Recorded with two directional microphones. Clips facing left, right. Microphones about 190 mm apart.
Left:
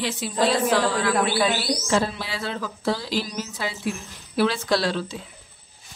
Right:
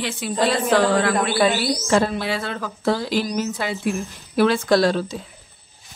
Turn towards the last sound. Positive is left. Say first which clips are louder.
# right 6 dB
turn(degrees=-45)  # may be behind; listen again after turning